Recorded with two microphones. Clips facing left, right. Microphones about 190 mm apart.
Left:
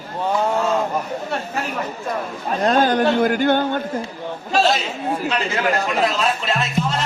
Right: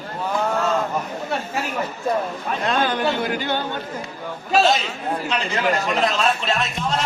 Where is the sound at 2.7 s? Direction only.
40° left (ahead or behind).